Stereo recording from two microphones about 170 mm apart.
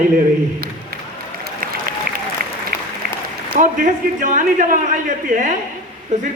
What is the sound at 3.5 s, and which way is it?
A man's voice, 50° right (ahead or behind).